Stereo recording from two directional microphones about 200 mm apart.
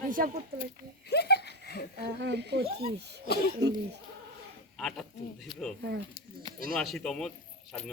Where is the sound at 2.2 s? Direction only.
55° right (ahead or behind).